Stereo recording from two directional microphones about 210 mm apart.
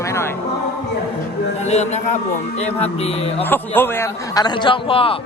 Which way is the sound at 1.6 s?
30° left (ahead or behind).